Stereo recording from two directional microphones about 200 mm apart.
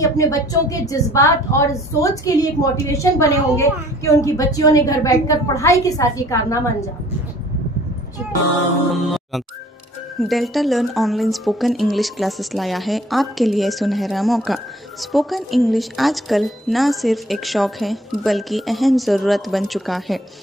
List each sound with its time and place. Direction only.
0.0 s a woman's voice: 15° left (ahead or behind)
10.2 s a woman's voice: centre (ahead or behind)